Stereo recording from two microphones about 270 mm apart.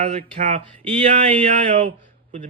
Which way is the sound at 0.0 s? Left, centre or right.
Right.